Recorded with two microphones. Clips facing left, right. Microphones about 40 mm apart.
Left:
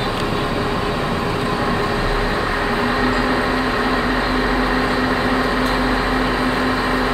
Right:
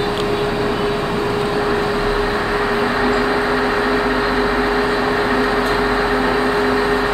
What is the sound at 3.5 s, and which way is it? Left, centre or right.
Microwave oven, centre.